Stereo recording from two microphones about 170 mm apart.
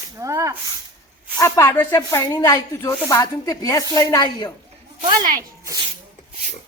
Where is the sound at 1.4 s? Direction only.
15° left (ahead or behind).